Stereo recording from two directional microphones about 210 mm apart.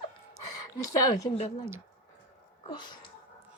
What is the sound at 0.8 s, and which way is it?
Speech, 15° left (ahead or behind).